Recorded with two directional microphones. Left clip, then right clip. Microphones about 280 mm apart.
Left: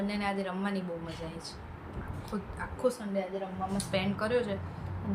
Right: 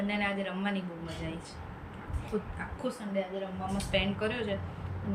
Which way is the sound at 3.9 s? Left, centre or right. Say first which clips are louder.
Left 1 dB; centre.